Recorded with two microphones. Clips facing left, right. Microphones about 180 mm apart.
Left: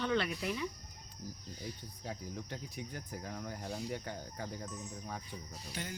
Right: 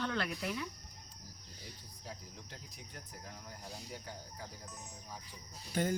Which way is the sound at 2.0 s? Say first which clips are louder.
Left 7 dB; 70° left (ahead or behind).